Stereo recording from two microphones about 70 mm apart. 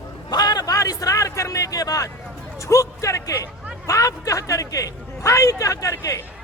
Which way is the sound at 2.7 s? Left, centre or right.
Left.